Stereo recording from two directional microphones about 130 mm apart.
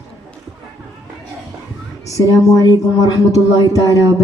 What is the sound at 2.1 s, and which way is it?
Speech, 25° left (ahead or behind).